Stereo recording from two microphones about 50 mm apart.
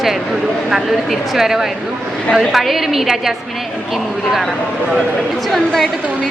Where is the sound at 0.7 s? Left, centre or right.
Centre.